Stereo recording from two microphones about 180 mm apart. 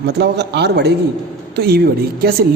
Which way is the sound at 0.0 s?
65° right (ahead or behind).